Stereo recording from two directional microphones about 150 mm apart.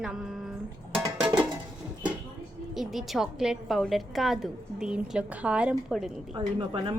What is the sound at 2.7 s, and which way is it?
A woman's voice, centre (ahead or behind).